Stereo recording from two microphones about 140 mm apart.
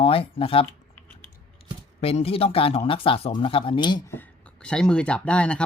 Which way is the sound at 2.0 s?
45° left (ahead or behind).